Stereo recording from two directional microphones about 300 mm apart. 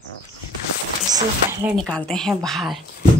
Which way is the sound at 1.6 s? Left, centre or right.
Centre.